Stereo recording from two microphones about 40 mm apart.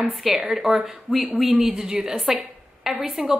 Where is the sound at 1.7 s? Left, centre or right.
Centre.